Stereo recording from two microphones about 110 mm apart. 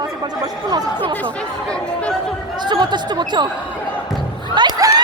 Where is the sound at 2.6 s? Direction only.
45° right (ahead or behind).